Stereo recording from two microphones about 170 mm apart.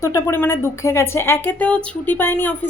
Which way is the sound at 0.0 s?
15° left (ahead or behind).